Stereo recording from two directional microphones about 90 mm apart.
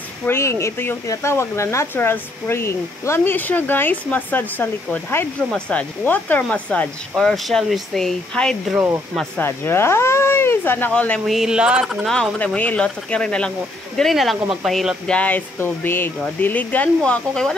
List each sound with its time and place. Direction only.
0.3 s speech: 30° left (ahead or behind)
7.2 s speech: 5° left (ahead or behind)
8.7 s speech: 30° right (ahead or behind)
9.4 s speech: 25° left (ahead or behind)
11.2 s speech: 5° right (ahead or behind)
12.1 s speech: 10° left (ahead or behind)
15.0 s speech: 15° left (ahead or behind)